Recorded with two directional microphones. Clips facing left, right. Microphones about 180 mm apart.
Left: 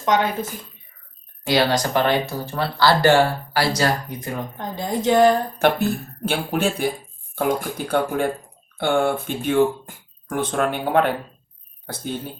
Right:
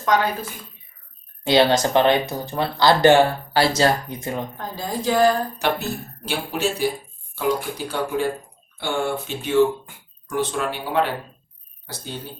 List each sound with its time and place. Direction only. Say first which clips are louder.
0.0 s a woman's voice: even; 20° left (ahead or behind)
1.5 s speech: right 3 dB; 25° right (ahead or behind)
4.5 s a woman's voice: left 3 dB; 20° left (ahead or behind)
6.2 s speech: left 2 dB; 55° left (ahead or behind)